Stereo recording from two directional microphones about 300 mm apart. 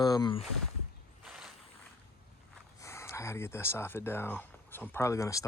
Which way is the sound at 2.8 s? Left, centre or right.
Centre.